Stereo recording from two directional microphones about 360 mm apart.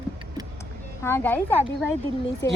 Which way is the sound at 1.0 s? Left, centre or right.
Centre.